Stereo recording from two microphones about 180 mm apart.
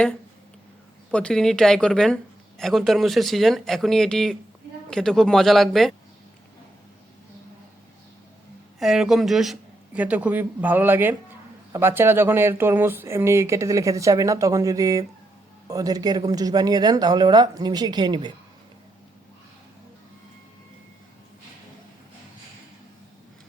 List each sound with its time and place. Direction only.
1.1 s speech: 5° left (ahead or behind)
8.8 s a man's voice: centre (ahead or behind); by 18.3 s 25° right (ahead or behind)